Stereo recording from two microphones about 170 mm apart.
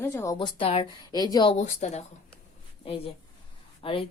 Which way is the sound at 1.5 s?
45° left (ahead or behind).